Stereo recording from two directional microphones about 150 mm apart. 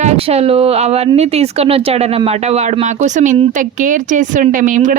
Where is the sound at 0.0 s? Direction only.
45° right (ahead or behind).